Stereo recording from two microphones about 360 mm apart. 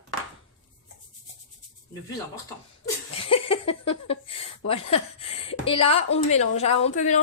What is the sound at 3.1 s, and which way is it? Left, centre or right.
A woman's voice, centre.